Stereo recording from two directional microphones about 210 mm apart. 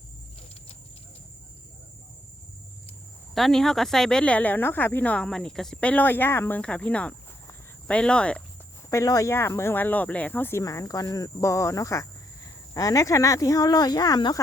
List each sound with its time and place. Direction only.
3.3 s speech: centre (ahead or behind); by 14.3 s 20° left (ahead or behind)